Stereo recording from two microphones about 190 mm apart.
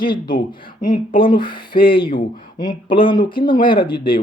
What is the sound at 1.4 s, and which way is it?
Speech, 25° left (ahead or behind).